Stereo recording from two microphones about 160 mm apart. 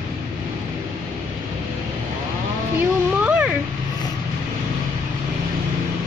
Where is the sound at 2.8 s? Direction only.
10° right (ahead or behind).